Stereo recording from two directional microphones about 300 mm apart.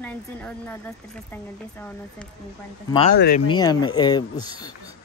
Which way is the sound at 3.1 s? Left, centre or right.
Left.